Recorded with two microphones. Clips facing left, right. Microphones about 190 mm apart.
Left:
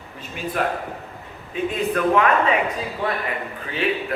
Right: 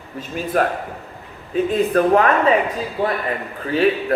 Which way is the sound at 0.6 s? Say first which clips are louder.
Right 5 dB; 45° right (ahead or behind).